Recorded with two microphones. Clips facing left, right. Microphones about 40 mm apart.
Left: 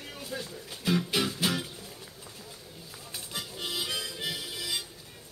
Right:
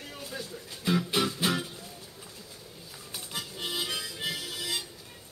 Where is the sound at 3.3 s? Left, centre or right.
Centre.